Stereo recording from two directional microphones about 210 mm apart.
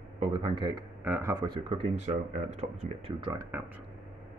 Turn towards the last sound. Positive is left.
turn(degrees=-15)  # may be behind; listen again after turning